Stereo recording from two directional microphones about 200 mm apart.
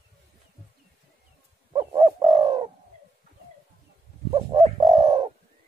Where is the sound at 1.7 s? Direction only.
20° right (ahead or behind).